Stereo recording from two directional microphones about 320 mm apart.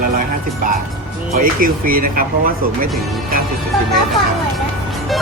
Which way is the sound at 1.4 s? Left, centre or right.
Right.